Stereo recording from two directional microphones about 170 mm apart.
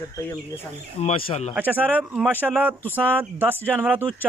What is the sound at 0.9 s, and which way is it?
Speech, 40° left (ahead or behind).